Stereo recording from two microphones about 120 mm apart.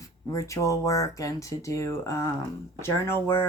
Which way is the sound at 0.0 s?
25° left (ahead or behind).